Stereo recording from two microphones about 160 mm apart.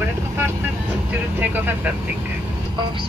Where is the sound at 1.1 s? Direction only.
10° right (ahead or behind).